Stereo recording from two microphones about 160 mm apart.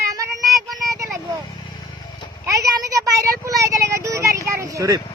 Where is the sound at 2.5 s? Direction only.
20° right (ahead or behind).